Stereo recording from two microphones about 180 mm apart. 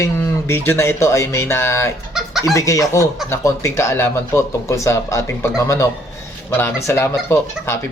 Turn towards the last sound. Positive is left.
turn(degrees=15)  # may be behind; listen again after turning